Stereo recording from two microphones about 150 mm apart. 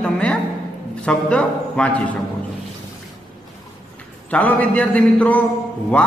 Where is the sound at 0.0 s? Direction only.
5° left (ahead or behind).